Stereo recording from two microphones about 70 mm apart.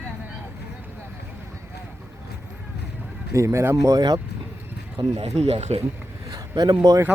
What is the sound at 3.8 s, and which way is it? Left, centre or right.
Speech, right.